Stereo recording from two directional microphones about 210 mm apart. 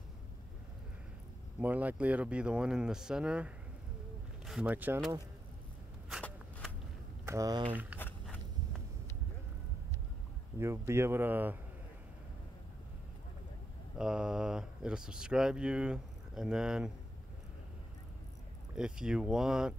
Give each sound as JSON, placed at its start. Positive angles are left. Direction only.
{"t": 1.6, "sound": "speech", "side_deg": -10}
{"t": 6.0, "sound": "shuffling cards", "side_deg": 0}
{"t": 7.2, "sound": "speech", "side_deg": -15}
{"t": 8.0, "sound": "a sound", "side_deg": 10}
{"t": 10.6, "sound": "speech", "side_deg": -10}
{"t": 13.9, "sound": "speech", "side_deg": -5}
{"t": 18.8, "sound": "speech", "side_deg": -5}